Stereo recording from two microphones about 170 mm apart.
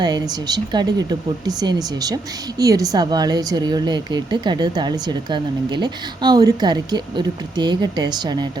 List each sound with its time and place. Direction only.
0.0 s a woman's voice: 25° right (ahead or behind)